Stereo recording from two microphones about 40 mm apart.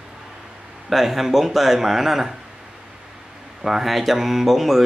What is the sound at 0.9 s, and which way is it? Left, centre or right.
Speech, centre.